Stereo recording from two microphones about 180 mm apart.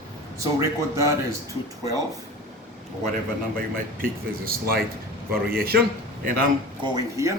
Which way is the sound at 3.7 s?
55° right (ahead or behind).